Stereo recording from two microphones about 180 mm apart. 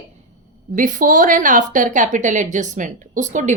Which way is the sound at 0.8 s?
50° right (ahead or behind).